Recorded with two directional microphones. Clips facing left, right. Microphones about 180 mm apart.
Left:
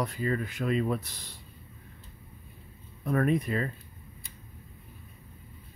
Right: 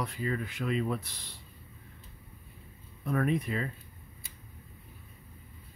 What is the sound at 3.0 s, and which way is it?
Speech, 45° left (ahead or behind).